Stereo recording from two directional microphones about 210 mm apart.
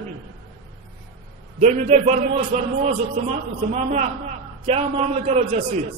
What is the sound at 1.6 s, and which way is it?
A man's voice, 30° right (ahead or behind).